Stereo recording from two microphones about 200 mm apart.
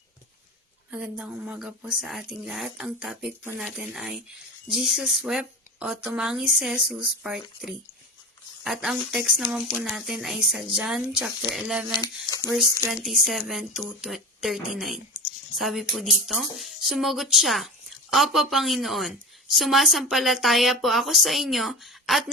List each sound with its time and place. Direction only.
0.9 s a woman's voice: 5° right (ahead or behind)
11.9 s speech: 20° left (ahead or behind)
12.9 s a woman's voice: centre (ahead or behind)